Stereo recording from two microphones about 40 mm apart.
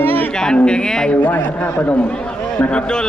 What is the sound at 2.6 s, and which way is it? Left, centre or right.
Speech, left.